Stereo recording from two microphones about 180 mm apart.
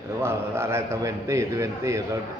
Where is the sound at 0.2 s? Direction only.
15° right (ahead or behind).